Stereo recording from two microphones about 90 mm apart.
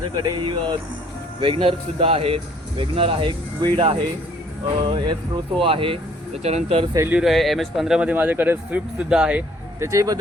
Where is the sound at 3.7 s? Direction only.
75° right (ahead or behind).